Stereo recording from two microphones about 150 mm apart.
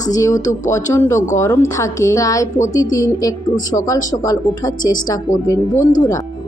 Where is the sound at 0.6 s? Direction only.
20° left (ahead or behind).